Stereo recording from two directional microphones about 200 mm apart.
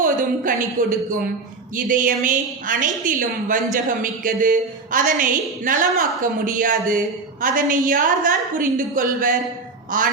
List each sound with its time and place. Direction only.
0.0 s a woman's voice: 40° right (ahead or behind)